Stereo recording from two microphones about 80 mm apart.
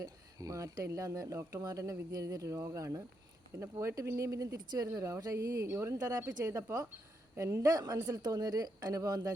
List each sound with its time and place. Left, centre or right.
0.0 s speech: right
4.5 s a woman's voice: right
4.9 s speech: right
5.9 s speech: right
6.4 s a woman's voice: right